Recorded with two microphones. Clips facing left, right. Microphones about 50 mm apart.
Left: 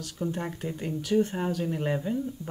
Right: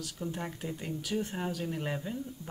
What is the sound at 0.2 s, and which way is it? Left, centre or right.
Speech, left.